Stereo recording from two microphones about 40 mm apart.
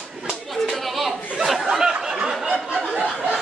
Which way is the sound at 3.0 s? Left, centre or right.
Right.